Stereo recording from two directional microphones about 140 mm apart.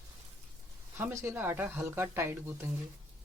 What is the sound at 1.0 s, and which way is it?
Speech, 15° right (ahead or behind).